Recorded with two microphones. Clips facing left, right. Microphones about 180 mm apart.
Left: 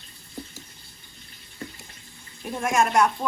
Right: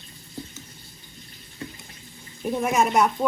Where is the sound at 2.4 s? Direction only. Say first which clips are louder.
Right 1 dB; 5° right (ahead or behind).